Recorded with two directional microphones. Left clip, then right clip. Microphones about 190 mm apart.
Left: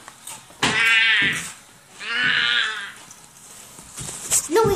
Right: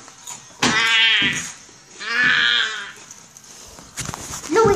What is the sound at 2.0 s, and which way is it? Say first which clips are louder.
Livestock: right 3 dB; 25° right (ahead or behind).